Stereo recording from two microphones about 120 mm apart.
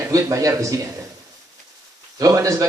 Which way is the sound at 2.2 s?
30° right (ahead or behind).